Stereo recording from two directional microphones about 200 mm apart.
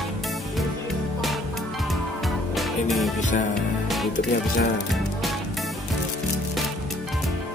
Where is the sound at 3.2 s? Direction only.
40° left (ahead or behind).